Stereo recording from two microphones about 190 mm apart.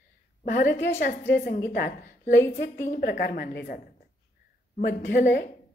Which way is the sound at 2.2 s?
15° left (ahead or behind).